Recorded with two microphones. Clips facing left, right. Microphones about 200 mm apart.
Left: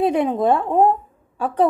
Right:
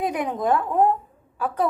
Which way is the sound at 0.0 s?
25° left (ahead or behind).